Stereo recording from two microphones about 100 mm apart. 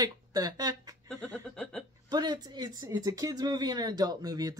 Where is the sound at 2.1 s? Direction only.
45° right (ahead or behind).